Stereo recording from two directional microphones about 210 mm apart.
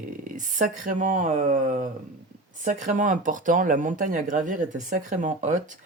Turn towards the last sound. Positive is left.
turn(degrees=-35)  # may be behind; listen again after turning